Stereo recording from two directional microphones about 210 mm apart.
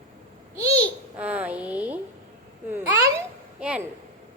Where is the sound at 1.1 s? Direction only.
5° right (ahead or behind).